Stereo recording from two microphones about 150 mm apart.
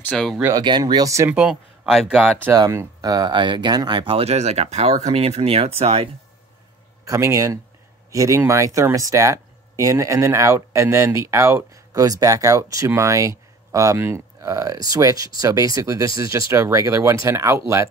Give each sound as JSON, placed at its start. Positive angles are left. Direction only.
{"t": 0.0, "sound": "speech", "side_deg": 5}
{"t": 0.4, "sound": "speech", "side_deg": -25}
{"t": 1.3, "sound": "speech", "side_deg": -5}
{"t": 2.5, "sound": "speech", "side_deg": -20}
{"t": 7.1, "sound": "speech", "side_deg": -20}